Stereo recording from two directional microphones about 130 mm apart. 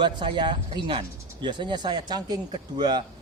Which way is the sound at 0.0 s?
35° right (ahead or behind).